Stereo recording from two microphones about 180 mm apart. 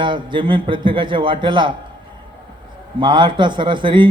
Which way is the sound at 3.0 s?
25° right (ahead or behind).